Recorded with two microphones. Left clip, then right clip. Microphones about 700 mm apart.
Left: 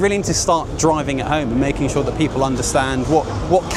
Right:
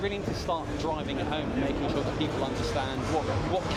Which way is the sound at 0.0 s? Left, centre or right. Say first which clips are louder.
Left 14 dB; left.